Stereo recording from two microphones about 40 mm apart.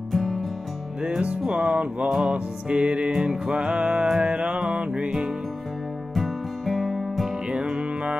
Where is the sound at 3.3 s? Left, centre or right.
Centre.